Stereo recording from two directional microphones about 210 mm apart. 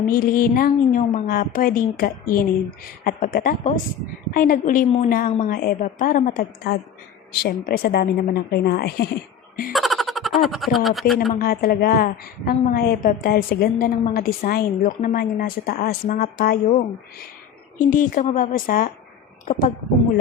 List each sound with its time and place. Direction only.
0.0 s a woman's voice: 40° left (ahead or behind)
9.7 s speech: centre (ahead or behind)
11.3 s a woman's voice: 45° left (ahead or behind)
17.7 s a woman's voice: 40° left (ahead or behind)